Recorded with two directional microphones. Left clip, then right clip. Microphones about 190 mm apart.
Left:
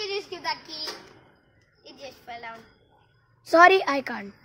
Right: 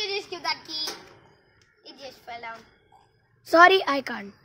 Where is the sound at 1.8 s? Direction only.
5° right (ahead or behind).